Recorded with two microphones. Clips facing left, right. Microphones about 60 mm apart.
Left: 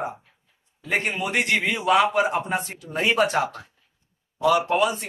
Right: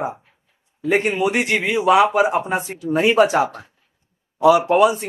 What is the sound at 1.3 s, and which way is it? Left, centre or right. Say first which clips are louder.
Speech: right 3 dB; centre.